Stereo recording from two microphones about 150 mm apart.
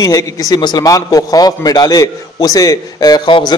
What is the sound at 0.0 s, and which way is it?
A man's voice, 25° left (ahead or behind).